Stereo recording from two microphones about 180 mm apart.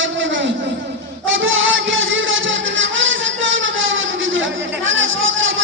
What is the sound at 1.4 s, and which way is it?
Music, 90° right.